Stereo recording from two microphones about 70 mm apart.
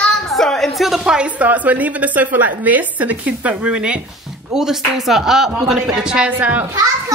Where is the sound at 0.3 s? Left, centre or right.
Centre.